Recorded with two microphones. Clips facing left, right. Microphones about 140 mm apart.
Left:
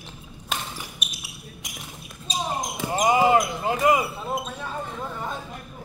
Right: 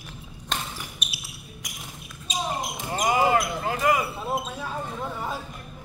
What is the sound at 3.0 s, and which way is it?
Basketball bounce, 20° left (ahead or behind).